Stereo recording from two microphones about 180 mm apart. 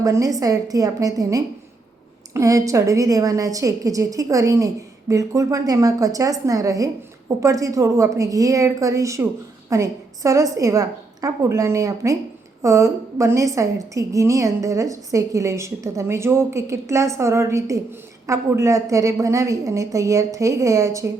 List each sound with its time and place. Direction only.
0.0 s a woman's voice: 20° right (ahead or behind)